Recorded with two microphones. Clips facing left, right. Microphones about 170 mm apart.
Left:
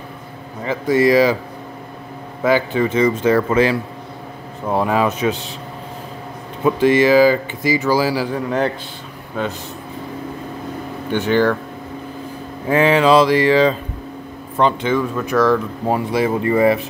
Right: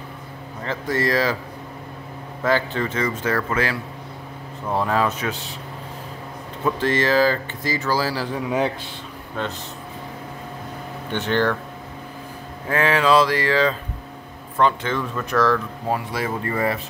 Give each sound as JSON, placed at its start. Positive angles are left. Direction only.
{"t": 0.7, "sound": "speech", "side_deg": 10}
{"t": 2.4, "sound": "speech", "side_deg": 10}
{"t": 6.6, "sound": "speech", "side_deg": 15}
{"t": 8.4, "sound": "a man's voice", "side_deg": -5}
{"t": 9.4, "sound": "speech", "side_deg": 5}
{"t": 11.1, "sound": "speech", "side_deg": 5}
{"t": 12.6, "sound": "speech", "side_deg": 20}